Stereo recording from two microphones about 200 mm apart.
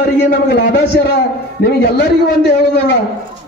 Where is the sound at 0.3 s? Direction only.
60° left (ahead or behind).